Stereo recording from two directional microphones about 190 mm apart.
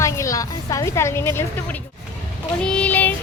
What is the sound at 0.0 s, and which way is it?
A woman's voice, 15° left (ahead or behind).